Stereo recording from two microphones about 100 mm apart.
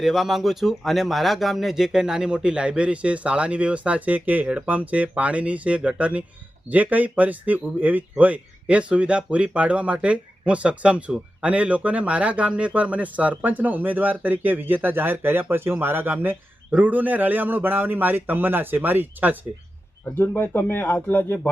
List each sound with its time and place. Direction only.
0.0 s speech: 5° right (ahead or behind)
20.1 s speech: 20° left (ahead or behind)